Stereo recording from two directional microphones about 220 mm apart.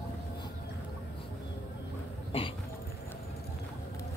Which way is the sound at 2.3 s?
25° left (ahead or behind).